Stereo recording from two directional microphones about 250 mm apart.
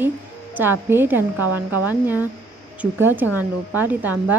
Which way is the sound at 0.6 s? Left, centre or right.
Centre.